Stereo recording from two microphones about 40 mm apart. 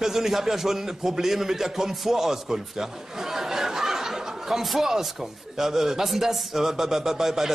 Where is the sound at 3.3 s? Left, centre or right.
Centre.